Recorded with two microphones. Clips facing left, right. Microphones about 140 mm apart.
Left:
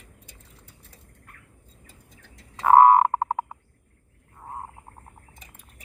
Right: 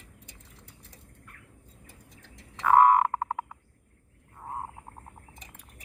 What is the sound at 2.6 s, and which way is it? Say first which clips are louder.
Frog: left 5 dB; 40° left (ahead or behind).